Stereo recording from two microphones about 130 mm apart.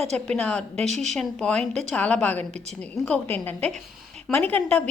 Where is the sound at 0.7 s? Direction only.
60° right (ahead or behind).